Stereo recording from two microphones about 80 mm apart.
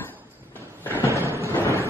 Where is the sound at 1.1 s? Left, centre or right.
Right.